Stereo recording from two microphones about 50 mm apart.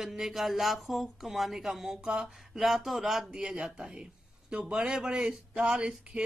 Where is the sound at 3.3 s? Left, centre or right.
Centre.